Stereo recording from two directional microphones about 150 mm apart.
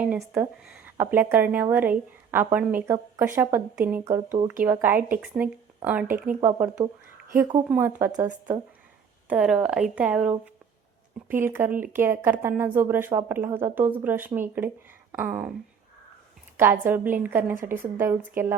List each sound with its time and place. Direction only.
0.0 s speech: 5° right (ahead or behind)
9.2 s speech: 10° right (ahead or behind)
16.8 s speech: 10° right (ahead or behind)